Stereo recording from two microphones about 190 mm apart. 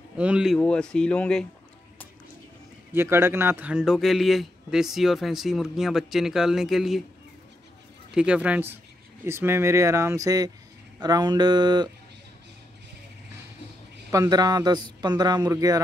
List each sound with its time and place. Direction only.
0.2 s a man's voice: 5° right (ahead or behind)
2.9 s a man's voice: 10° right (ahead or behind)
8.1 s speech: 5° right (ahead or behind); by 11.9 s 20° right (ahead or behind)
14.1 s speech: 20° right (ahead or behind)